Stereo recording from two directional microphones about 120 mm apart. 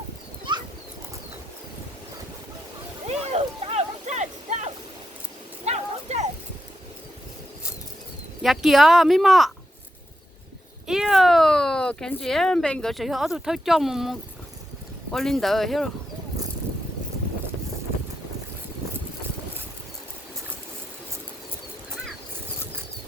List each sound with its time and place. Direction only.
3.1 s a sound: 60° right (ahead or behind)
8.4 s speech: centre (ahead or behind)
10.8 s speech: 5° right (ahead or behind)